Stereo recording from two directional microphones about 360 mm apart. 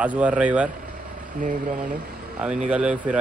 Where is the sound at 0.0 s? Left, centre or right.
Centre.